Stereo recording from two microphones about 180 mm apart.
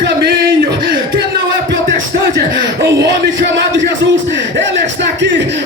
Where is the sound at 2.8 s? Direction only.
85° right.